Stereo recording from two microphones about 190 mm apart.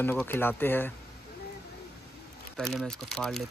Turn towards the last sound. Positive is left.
turn(degrees=0)  # may be behind; listen again after turning